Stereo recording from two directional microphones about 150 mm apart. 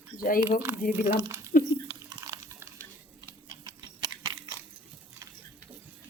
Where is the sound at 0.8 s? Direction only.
90° left.